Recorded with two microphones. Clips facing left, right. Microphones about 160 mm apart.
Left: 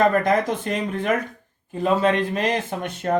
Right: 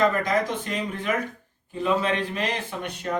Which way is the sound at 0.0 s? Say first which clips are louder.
Left 4 dB; 50° left (ahead or behind).